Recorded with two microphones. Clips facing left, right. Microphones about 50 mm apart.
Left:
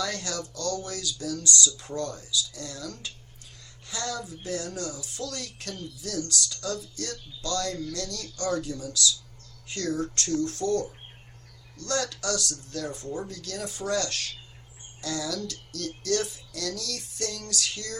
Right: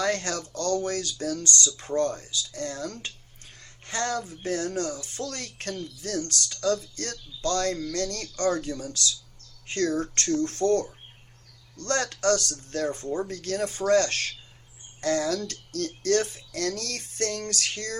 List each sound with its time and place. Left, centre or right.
0.0 s speech: right